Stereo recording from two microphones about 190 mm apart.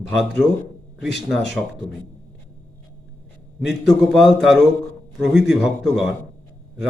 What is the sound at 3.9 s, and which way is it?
A man's voice, centre (ahead or behind).